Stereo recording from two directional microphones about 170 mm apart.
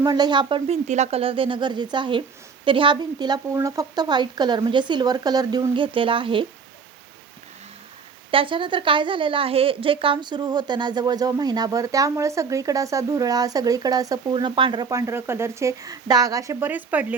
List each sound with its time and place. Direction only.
0.0 s a woman's voice: 25° right (ahead or behind)
0.9 s a woman's voice: 40° right (ahead or behind)
8.3 s a woman's voice: 30° right (ahead or behind); by 17.2 s 10° right (ahead or behind)